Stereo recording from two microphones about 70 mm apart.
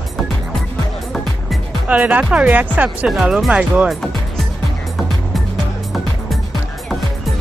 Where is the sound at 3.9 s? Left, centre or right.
Centre.